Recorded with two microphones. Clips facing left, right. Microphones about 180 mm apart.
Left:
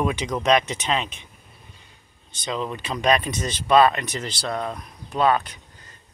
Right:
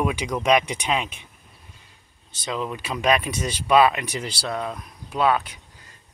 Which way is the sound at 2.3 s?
5° right (ahead or behind).